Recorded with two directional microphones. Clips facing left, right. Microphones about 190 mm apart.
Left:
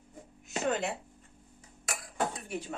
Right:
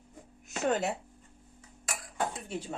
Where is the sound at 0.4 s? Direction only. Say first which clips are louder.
Right 2 dB; 45° right (ahead or behind).